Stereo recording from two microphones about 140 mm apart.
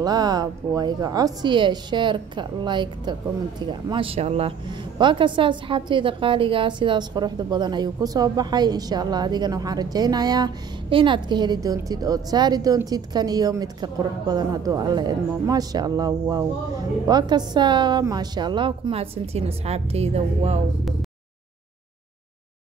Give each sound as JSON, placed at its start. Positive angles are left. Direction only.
{"t": 0.0, "sound": "a woman's voice", "side_deg": -30}
{"t": 4.9, "sound": "a woman's voice", "side_deg": -35}